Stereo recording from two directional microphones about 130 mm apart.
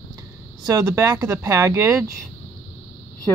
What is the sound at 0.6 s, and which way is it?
Speech, 30° right (ahead or behind).